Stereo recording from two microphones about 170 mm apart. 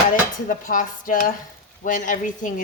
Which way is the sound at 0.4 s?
55° left (ahead or behind).